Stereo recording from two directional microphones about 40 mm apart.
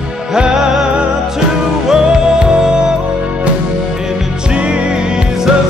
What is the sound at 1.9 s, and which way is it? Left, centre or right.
Music, right.